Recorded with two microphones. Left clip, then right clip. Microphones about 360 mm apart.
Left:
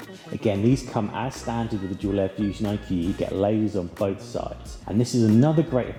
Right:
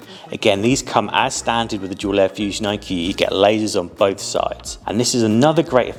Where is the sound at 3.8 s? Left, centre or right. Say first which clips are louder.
Right 9 dB; centre.